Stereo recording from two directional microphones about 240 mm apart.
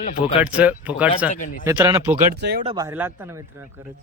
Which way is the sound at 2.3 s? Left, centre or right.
Right.